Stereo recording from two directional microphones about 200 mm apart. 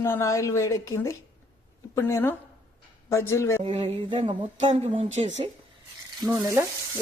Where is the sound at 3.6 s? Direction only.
25° right (ahead or behind).